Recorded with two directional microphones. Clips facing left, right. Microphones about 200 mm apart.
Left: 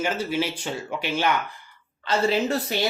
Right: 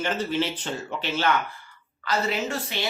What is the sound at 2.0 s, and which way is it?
Speech, 30° left (ahead or behind).